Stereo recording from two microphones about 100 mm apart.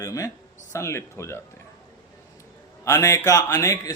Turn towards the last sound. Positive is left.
turn(degrees=35)  # may be behind; listen again after turning